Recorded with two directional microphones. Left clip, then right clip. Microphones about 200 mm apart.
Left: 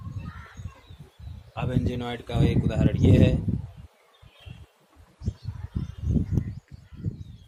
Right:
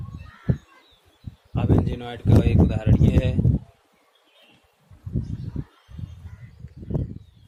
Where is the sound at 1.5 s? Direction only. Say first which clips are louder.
Right 5 dB; 10° left (ahead or behind).